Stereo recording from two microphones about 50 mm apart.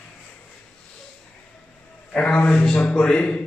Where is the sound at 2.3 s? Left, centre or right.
Left.